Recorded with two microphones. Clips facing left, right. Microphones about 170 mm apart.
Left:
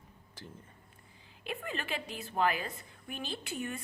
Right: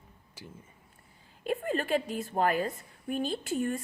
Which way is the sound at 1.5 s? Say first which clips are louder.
Right 9 dB; 45° right (ahead or behind).